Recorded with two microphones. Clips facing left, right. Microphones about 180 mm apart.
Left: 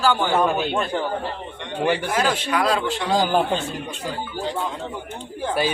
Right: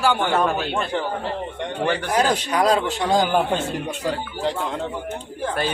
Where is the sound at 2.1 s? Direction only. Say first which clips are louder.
Right 1 dB; 40° right (ahead or behind).